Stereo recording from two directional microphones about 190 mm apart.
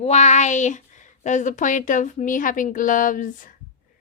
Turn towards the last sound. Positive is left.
turn(degrees=45)  # may be behind; listen again after turning